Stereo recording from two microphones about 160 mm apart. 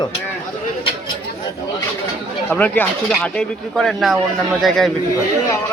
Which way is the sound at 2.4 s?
10° left (ahead or behind).